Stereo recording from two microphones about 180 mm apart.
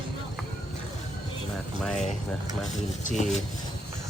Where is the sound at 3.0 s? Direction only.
40° left (ahead or behind).